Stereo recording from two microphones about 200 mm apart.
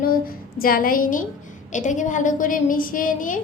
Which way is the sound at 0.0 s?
45° left (ahead or behind).